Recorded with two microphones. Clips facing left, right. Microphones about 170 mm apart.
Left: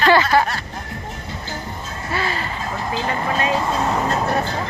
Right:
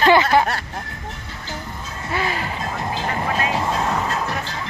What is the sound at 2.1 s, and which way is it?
Speech, 15° right (ahead or behind).